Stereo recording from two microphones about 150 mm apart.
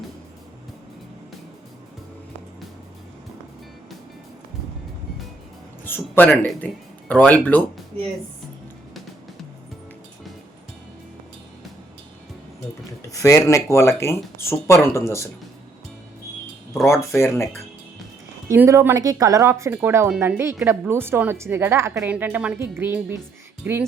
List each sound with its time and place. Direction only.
5.8 s speech: 10° left (ahead or behind)
13.0 s speech: 20° left (ahead or behind)
16.8 s speech: 20° left (ahead or behind)
18.4 s speech: 15° right (ahead or behind)